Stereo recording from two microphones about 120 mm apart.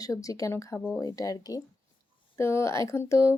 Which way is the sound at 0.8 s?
15° left (ahead or behind).